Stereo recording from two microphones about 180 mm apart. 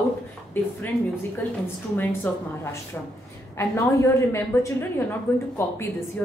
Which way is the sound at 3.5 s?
15° left (ahead or behind).